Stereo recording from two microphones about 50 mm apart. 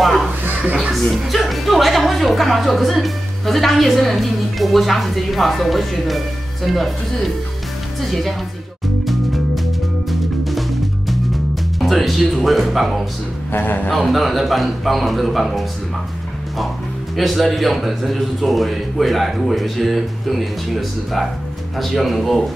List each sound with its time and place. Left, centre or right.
0.0 s a sound: centre
1.1 s a woman's voice: centre
9.0 s music: centre
11.8 s a woman's voice: centre
13.5 s speech: left
13.9 s a woman's voice: centre
17.2 s a woman's voice: centre